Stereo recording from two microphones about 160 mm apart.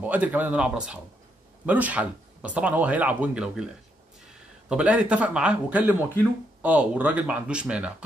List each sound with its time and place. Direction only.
0.0 s speech: 10° right (ahead or behind)
4.6 s speech: 5° right (ahead or behind)